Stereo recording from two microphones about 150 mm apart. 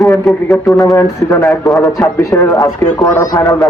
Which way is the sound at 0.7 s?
20° left (ahead or behind).